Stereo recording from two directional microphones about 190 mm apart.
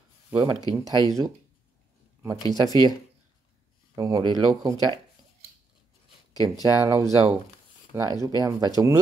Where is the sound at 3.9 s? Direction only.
15° right (ahead or behind).